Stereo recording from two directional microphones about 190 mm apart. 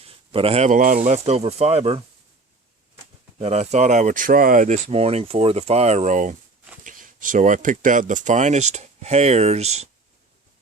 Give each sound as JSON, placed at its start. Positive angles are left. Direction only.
{"t": 0.0, "sound": "speech", "side_deg": -30}
{"t": 3.3, "sound": "speech", "side_deg": -35}